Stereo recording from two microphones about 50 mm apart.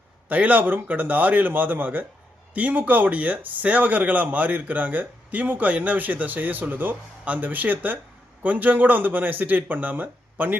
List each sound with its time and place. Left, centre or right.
0.3 s speech: right